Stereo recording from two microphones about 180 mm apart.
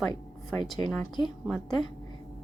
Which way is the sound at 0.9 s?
Centre (ahead or behind).